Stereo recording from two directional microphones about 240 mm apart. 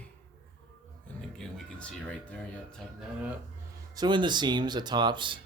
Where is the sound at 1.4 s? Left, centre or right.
Centre.